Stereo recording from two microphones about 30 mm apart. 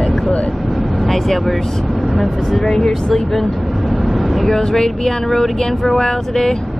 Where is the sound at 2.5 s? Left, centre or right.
Centre.